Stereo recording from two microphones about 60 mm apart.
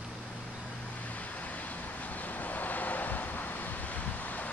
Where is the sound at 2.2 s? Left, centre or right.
Left.